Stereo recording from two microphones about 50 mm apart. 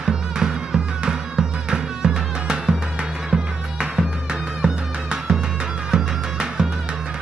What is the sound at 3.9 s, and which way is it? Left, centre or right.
Music, centre.